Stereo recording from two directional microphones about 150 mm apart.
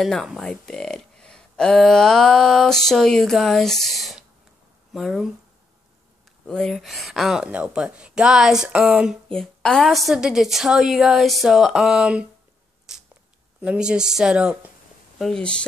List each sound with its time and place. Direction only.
0.0 s speech: centre (ahead or behind)
6.4 s speech: 5° left (ahead or behind)
12.9 s a sound: 5° right (ahead or behind)
13.6 s speech: 5° right (ahead or behind)
15.1 s speech: 5° left (ahead or behind)